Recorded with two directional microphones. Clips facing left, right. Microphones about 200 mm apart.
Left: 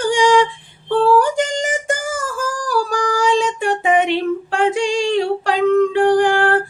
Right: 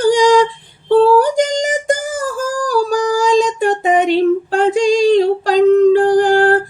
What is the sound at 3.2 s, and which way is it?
Female singing, 40° right (ahead or behind).